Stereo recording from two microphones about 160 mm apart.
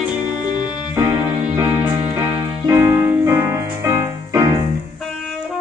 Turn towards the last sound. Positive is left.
turn(degrees=-20)  # may be behind; listen again after turning